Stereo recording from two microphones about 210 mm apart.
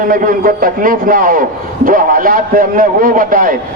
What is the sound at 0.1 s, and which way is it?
A man's voice, 40° right (ahead or behind).